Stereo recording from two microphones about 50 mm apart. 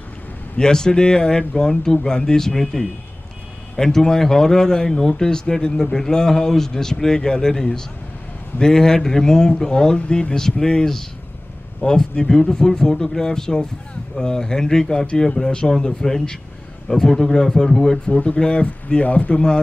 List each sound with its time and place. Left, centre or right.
0.6 s speech: centre
18.0 s speech: left
19.3 s speech: centre